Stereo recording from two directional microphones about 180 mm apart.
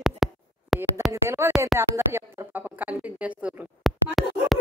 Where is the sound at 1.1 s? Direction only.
15° right (ahead or behind).